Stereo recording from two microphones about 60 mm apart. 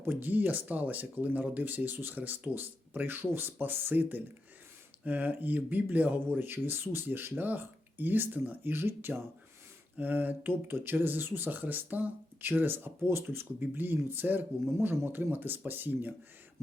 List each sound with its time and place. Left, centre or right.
0.0 s speech: right